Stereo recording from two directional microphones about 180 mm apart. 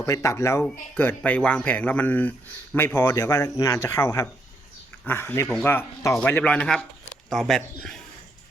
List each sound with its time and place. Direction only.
0.0 s a man's voice: 15° left (ahead or behind)